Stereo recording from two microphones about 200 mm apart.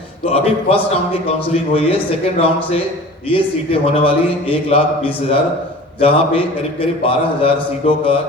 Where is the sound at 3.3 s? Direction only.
25° left (ahead or behind).